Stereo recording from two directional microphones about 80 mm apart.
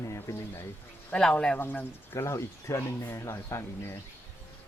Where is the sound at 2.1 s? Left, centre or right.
Left.